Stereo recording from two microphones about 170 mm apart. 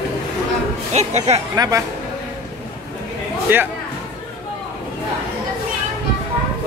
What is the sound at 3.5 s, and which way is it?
Speech, 10° right (ahead or behind).